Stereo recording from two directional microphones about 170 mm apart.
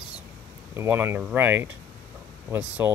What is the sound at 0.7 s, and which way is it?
Speech, 15° right (ahead or behind).